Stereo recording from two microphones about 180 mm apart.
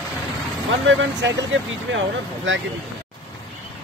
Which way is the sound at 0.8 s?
90° right.